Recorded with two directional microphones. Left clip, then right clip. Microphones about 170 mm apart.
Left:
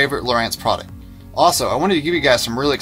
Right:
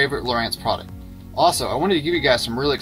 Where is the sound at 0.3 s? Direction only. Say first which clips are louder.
Left 4 dB; 25° left (ahead or behind).